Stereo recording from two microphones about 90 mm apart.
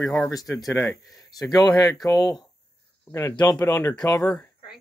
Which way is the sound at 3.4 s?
40° left (ahead or behind).